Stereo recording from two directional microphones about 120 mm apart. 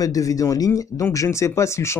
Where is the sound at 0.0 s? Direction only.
30° left (ahead or behind).